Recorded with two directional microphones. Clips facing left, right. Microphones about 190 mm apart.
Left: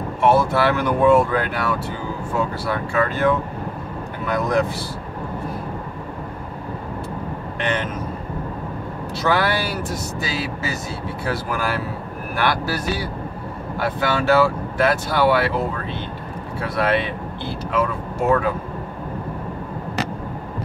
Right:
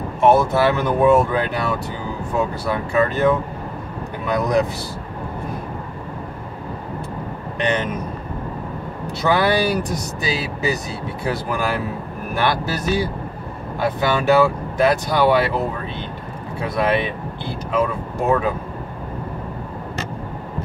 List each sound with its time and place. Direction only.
0.2 s speech: 20° right (ahead or behind)
7.6 s speech: 15° right (ahead or behind)
9.2 s speech: 15° right (ahead or behind)